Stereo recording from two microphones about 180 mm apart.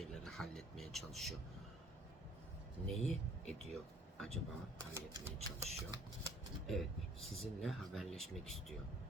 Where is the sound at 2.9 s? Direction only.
5° left (ahead or behind).